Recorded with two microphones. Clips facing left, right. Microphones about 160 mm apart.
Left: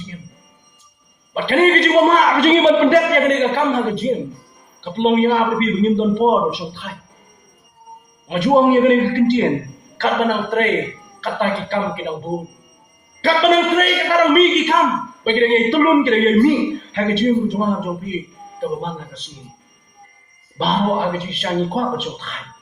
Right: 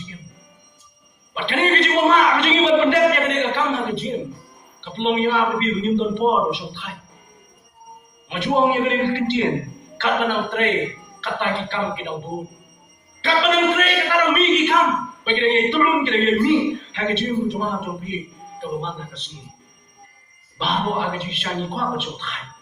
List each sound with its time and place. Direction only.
1.3 s speech: 40° left (ahead or behind)
8.3 s speech: 40° left (ahead or behind)
13.2 s speech: 40° left (ahead or behind)
20.6 s speech: 40° left (ahead or behind)